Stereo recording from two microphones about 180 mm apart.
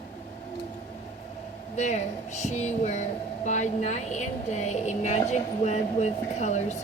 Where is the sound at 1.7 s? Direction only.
40° left (ahead or behind).